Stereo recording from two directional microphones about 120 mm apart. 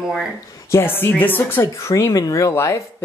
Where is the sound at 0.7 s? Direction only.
15° left (ahead or behind).